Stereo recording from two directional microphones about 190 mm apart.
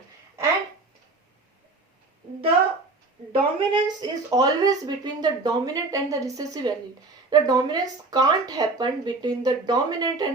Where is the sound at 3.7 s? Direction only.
20° right (ahead or behind).